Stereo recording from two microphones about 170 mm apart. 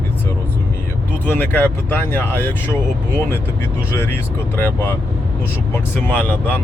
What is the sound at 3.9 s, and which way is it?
Speech, 15° left (ahead or behind).